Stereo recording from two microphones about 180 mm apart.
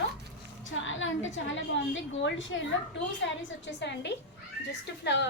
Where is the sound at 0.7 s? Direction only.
90° left.